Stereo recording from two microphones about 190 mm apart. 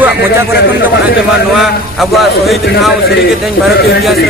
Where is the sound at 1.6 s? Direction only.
Centre (ahead or behind).